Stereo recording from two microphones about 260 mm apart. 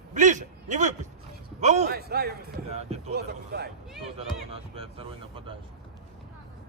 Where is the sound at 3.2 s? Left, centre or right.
Right.